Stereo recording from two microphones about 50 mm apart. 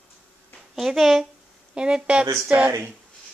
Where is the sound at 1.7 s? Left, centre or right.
Centre.